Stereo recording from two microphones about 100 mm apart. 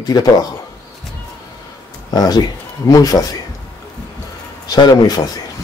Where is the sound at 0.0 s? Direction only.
40° left (ahead or behind).